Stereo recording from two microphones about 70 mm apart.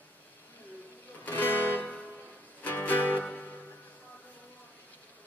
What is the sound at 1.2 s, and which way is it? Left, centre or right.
Music, left.